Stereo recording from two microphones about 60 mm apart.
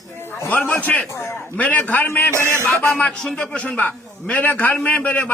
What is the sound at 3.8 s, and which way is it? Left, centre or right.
A man's voice, left.